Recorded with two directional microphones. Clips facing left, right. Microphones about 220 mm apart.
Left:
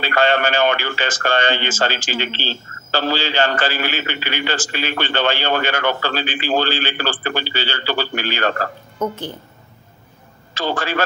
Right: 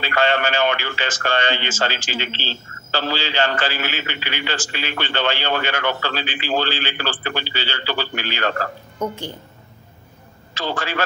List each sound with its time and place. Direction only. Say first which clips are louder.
0.0 s speech: left 2 dB; 45° left (ahead or behind)
9.0 s a woman's voice: left 2 dB; 10° right (ahead or behind)
10.5 s a man's voice: left 3 dB; 50° left (ahead or behind)